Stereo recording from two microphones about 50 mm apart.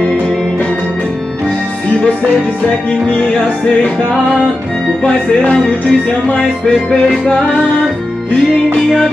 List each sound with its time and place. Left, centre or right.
2.9 s music: centre
5.7 s music: left